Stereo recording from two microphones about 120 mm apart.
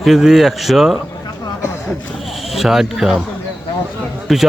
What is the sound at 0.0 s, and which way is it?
Speech, 5° right (ahead or behind).